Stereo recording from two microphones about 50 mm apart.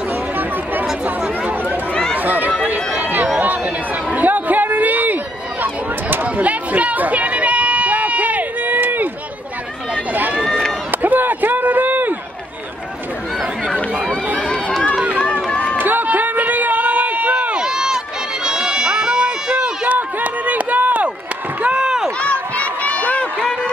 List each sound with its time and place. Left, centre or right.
2.1 s run: right
3.3 s a sound: right
6.2 s a sound: right
10.9 s run: right
14.5 s run: centre
14.9 s run: right
15.8 s a sound: right
17.6 s run: centre
19.9 s run: right
21.6 s run: centre
22.2 s run: left